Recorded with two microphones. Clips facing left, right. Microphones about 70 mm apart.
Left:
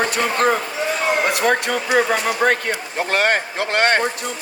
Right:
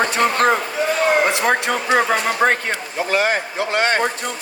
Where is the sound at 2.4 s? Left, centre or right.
Right.